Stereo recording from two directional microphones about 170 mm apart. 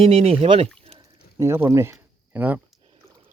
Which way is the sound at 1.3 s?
15° right (ahead or behind).